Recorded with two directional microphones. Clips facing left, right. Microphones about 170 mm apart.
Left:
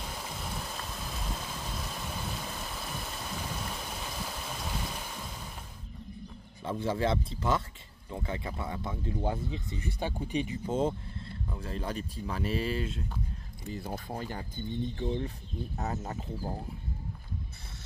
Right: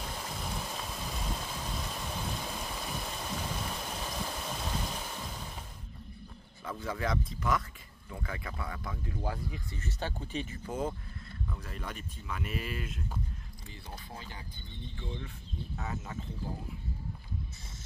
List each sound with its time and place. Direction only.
0.0 s vehicle: 5° left (ahead or behind)
6.6 s speech: 30° left (ahead or behind)
13.7 s speech: 45° left (ahead or behind)